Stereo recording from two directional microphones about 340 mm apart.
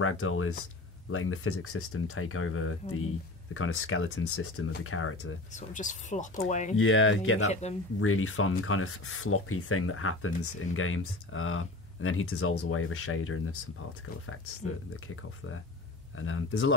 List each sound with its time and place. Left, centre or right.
0.0 s speech: left
5.5 s speech: left
6.8 s speech: left
16.2 s speech: left